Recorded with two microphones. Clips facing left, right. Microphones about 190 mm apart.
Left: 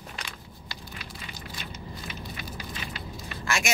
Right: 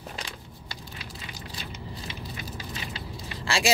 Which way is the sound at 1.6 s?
25° right (ahead or behind).